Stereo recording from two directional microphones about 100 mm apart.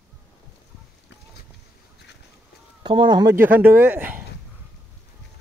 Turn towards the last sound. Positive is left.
turn(degrees=-15)  # may be behind; listen again after turning